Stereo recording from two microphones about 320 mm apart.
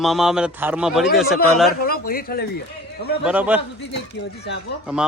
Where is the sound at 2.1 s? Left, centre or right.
Left.